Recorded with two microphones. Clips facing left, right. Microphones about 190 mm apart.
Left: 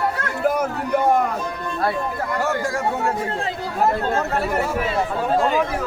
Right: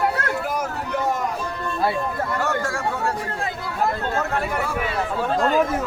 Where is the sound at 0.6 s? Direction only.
55° left (ahead or behind).